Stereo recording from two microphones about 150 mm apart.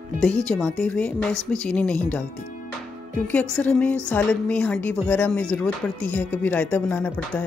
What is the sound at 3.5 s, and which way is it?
A woman's voice, 5° left (ahead or behind).